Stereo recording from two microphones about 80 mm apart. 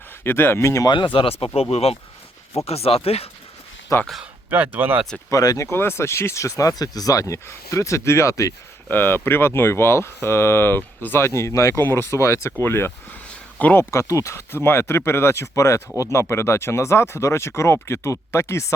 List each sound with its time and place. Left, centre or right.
0.3 s speech: left
0.9 s speech: left
3.9 s speech: left
4.4 s speech: right
5.3 s speech: left
5.7 s speech: left
8.9 s speech: left
11.3 s speech: left
11.8 s speech: left
12.1 s speech: left
13.9 s speech: left